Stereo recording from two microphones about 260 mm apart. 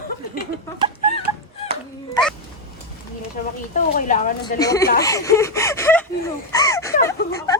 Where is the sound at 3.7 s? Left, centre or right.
Left.